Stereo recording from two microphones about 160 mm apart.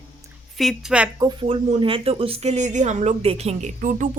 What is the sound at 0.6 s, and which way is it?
Speech, centre (ahead or behind).